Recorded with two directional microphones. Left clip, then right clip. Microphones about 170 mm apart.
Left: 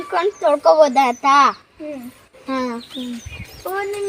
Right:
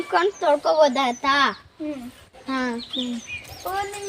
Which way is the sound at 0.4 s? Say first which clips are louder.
Left 7 dB; 60° left (ahead or behind).